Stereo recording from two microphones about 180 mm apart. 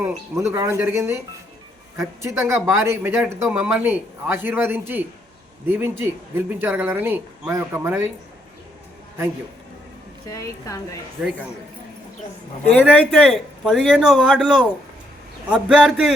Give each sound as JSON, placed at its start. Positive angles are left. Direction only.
{"t": 0.0, "sound": "speech", "side_deg": -15}
{"t": 10.2, "sound": "a woman's voice", "side_deg": 15}
{"t": 12.9, "sound": "a man's voice", "side_deg": 5}